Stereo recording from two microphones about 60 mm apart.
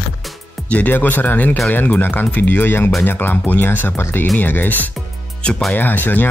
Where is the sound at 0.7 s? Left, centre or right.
Left.